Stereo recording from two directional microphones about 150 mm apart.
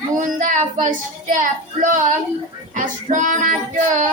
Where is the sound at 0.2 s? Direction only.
55° right (ahead or behind).